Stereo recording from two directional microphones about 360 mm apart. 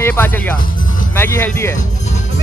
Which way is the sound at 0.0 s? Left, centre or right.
Centre.